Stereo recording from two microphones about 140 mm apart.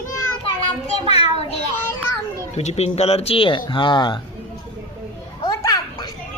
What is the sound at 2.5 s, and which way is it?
Speech, 50° left (ahead or behind).